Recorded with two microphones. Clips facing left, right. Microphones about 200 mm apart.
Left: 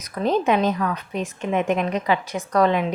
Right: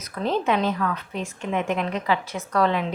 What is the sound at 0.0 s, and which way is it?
A woman's voice, 15° left (ahead or behind).